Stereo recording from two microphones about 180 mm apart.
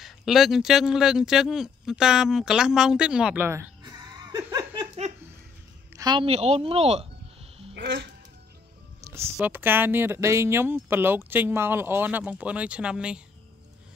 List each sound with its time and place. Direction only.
0.0 s speech: centre (ahead or behind); by 4.8 s 20° right (ahead or behind)
5.9 s a woman's voice: 25° right (ahead or behind)
7.7 s speech: 80° right
9.1 s speech: 15° right (ahead or behind)